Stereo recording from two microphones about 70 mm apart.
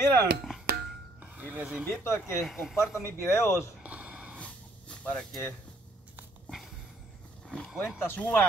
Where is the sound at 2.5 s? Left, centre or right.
Centre.